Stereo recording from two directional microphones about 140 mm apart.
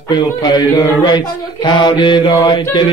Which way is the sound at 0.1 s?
30° left (ahead or behind).